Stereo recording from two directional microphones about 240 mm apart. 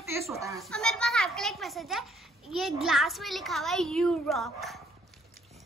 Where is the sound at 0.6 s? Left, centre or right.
Centre.